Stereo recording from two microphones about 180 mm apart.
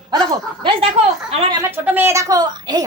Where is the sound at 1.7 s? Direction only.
10° right (ahead or behind).